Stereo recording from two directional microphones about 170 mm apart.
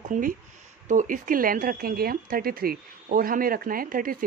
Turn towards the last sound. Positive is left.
turn(degrees=-55)  # may be behind; listen again after turning